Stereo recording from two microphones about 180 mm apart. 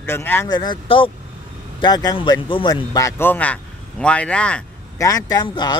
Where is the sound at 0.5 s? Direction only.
25° left (ahead or behind); by 4.6 s 5° left (ahead or behind).